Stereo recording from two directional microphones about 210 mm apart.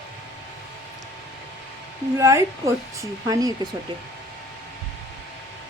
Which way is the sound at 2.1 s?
15° right (ahead or behind).